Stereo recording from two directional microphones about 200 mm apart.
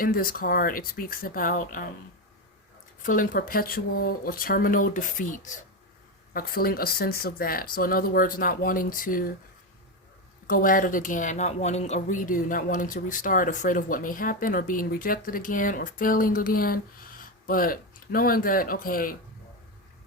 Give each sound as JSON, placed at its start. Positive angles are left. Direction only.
{"t": 0.0, "sound": "speech", "side_deg": 45}
{"t": 3.0, "sound": "speech", "side_deg": 45}
{"t": 10.4, "sound": "speech", "side_deg": 45}